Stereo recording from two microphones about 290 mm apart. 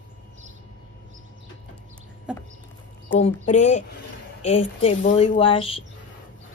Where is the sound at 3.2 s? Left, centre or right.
Left.